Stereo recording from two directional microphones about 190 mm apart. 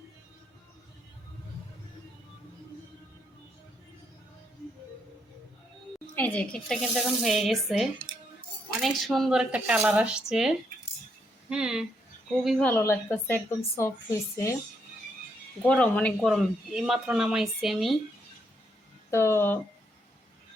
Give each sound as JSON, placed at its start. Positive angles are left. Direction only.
{"t": 6.1, "sound": "a woman's voice", "side_deg": 10}
{"t": 15.6, "sound": "speech", "side_deg": 5}
{"t": 19.1, "sound": "a woman's voice", "side_deg": 15}